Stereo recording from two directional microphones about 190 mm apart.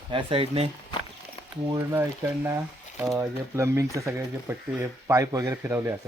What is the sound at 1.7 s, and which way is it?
Speech, 15° right (ahead or behind).